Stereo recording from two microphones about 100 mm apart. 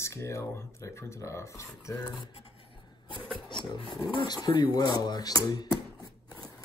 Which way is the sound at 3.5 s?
50° left (ahead or behind).